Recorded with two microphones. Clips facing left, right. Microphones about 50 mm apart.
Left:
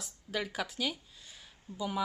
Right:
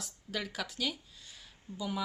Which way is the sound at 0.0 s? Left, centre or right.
Centre.